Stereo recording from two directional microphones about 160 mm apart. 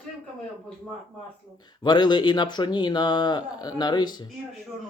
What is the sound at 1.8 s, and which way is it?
Speech, 30° left (ahead or behind).